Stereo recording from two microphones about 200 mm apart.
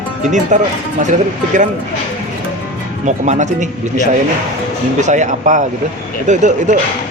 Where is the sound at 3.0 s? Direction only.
35° right (ahead or behind).